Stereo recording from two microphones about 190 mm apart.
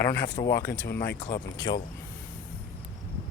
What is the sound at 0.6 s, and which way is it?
Speech, 60° left (ahead or behind).